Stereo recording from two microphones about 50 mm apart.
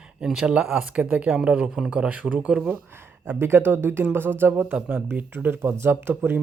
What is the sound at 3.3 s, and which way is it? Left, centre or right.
Speech, right.